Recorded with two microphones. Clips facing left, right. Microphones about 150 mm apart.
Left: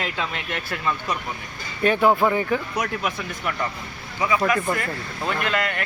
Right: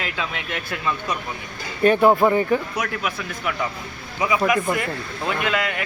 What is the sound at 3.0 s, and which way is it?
Speech, 5° right (ahead or behind).